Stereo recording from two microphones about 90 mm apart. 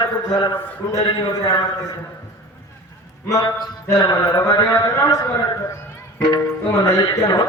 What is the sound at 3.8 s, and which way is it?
A man's voice, 45° left (ahead or behind).